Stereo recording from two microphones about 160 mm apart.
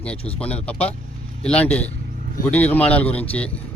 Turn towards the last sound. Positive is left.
turn(degrees=10)  # may be behind; listen again after turning